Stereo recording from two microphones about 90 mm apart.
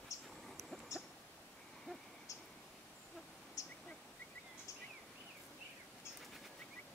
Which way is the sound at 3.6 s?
40° left (ahead or behind).